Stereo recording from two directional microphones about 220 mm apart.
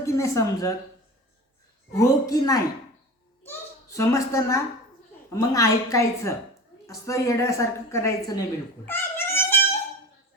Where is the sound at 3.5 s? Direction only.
15° left (ahead or behind).